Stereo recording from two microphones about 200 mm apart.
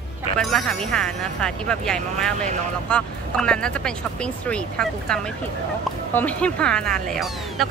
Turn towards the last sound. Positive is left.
turn(degrees=0)  # may be behind; listen again after turning